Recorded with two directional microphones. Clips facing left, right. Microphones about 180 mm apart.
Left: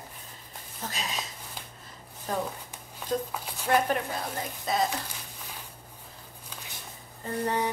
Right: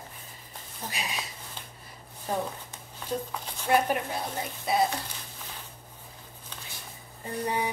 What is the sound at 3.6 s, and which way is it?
Speech, 10° right (ahead or behind).